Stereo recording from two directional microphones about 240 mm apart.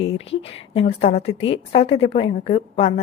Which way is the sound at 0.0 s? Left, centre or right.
Left.